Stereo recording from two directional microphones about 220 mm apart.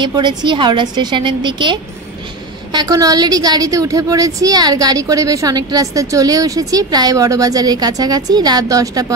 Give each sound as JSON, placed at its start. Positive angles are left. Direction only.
{"t": 0.0, "sound": "a woman's voice", "side_deg": -20}